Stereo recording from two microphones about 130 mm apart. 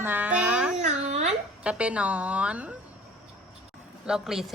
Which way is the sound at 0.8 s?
70° right (ahead or behind).